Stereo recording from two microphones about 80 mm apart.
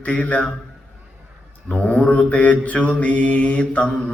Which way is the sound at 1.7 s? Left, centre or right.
Centre.